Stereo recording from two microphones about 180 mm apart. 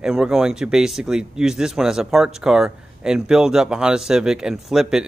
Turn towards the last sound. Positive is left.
turn(degrees=-5)  # may be behind; listen again after turning